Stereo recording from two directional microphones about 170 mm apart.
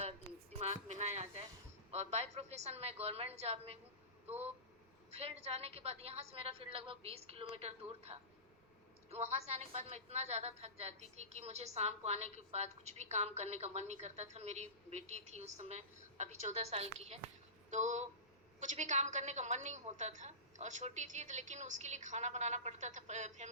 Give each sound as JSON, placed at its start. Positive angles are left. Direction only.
{"t": 0.6, "sound": "a sound", "side_deg": -40}
{"t": 1.9, "sound": "a woman's voice", "side_deg": -40}
{"t": 5.1, "sound": "a woman's voice", "side_deg": -40}